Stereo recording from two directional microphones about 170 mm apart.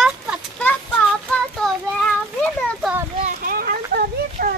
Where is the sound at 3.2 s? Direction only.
55° right (ahead or behind).